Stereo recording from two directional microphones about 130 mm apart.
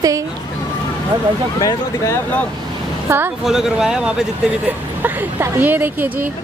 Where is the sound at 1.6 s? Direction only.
20° left (ahead or behind).